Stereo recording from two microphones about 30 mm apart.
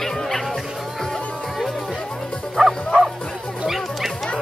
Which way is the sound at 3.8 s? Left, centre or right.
Centre.